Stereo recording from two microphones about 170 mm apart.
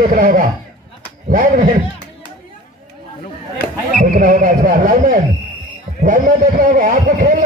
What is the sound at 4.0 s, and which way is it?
A man's voice, 50° right (ahead or behind).